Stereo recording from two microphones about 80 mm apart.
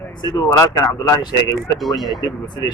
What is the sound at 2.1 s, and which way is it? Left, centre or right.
Speech, left.